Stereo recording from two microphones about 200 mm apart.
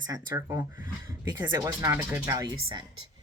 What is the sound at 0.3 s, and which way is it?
Speech, 15° right (ahead or behind).